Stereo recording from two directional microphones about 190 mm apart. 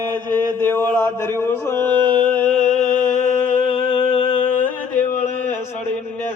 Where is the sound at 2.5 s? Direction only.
35° left (ahead or behind).